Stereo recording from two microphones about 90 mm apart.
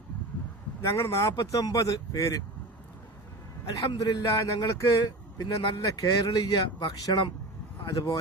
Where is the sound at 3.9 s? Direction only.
50° left (ahead or behind).